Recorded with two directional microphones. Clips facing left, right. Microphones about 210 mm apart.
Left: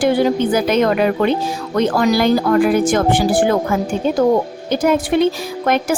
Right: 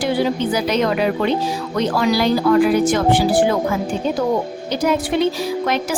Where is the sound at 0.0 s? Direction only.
50° left (ahead or behind).